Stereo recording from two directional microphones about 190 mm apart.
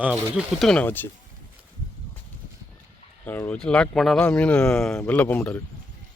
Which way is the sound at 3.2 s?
10° left (ahead or behind).